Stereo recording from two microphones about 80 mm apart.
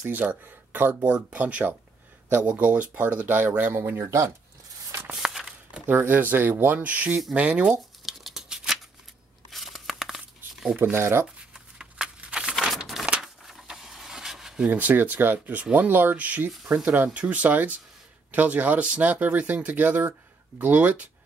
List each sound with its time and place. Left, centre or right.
0.2 s speech: centre
4.0 s speech: right
5.1 s a sound: centre
5.9 s speech: right
8.0 s a sound: centre
9.5 s crumpling: centre
10.8 s speech: right
11.5 s a sound: centre
14.6 s speech: centre